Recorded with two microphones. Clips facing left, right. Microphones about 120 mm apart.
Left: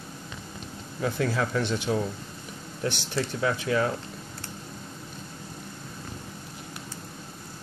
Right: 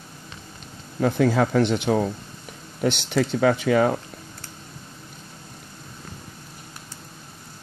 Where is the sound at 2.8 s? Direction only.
75° right (ahead or behind).